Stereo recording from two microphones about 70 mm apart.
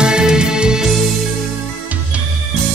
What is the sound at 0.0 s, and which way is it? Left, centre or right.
Music, centre.